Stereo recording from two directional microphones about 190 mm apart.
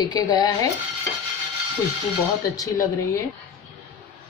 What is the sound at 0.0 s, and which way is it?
Speech, 20° left (ahead or behind).